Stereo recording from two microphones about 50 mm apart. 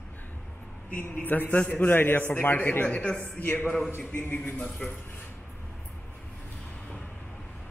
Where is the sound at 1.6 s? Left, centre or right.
Left.